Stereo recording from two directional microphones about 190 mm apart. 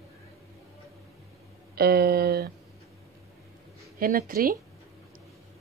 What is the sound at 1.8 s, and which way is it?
Speech, 55° right (ahead or behind).